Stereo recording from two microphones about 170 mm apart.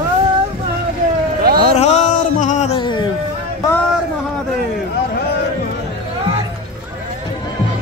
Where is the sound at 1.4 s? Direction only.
65° right (ahead or behind).